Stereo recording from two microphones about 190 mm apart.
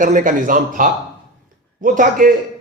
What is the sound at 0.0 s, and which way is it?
Speech, 45° right (ahead or behind).